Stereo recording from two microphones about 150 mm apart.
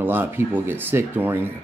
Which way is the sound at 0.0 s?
15° right (ahead or behind).